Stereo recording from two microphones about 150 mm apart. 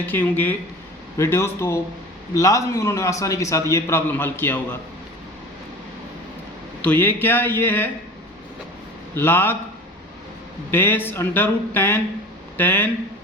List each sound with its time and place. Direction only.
0.0 s a man's voice: 15° left (ahead or behind)
6.8 s speech: 15° left (ahead or behind)
9.1 s speech: 15° left (ahead or behind)
10.7 s speech: 15° left (ahead or behind)